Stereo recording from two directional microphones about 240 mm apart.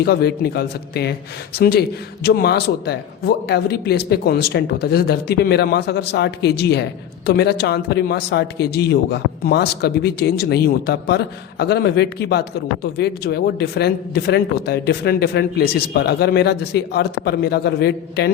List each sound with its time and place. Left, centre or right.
0.0 s a man's voice: left